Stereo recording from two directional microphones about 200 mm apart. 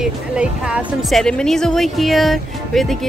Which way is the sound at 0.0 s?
5° right (ahead or behind).